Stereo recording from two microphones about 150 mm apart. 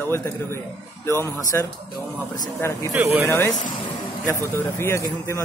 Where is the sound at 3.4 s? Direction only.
20° left (ahead or behind).